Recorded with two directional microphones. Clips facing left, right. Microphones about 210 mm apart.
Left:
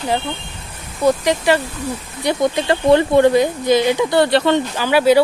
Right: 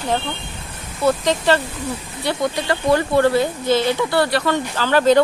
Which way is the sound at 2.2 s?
25° left (ahead or behind).